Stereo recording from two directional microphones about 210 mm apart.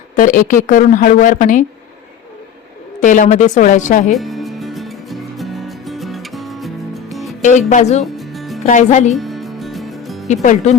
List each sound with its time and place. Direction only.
0.2 s a woman's voice: 40° left (ahead or behind)
3.0 s a woman's voice: 40° left (ahead or behind)
4.1 s music: centre (ahead or behind)
7.7 s a woman's voice: 35° left (ahead or behind)
8.0 s music: centre (ahead or behind)
8.6 s a woman's voice: 35° left (ahead or behind)
9.1 s music: centre (ahead or behind)
10.2 s a woman's voice: 35° left (ahead or behind)